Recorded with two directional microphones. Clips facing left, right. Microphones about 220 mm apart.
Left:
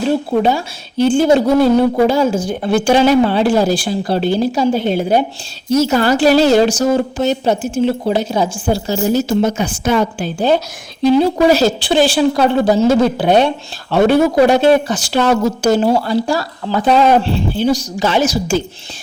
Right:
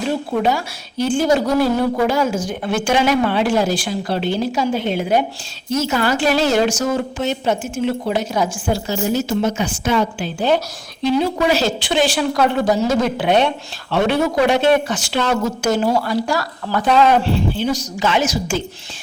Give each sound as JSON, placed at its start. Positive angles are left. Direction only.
{"t": 0.1, "sound": "a woman's voice", "side_deg": 30}